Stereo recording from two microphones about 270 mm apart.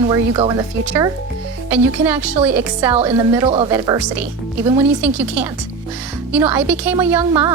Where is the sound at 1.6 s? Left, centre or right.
Centre.